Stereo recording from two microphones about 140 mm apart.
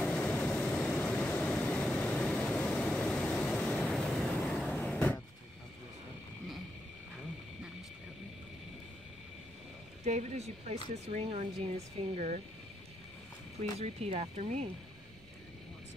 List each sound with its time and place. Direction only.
0.0 s vehicle: 10° left (ahead or behind)
10.0 s speech: 55° right (ahead or behind)
13.6 s speech: 50° right (ahead or behind)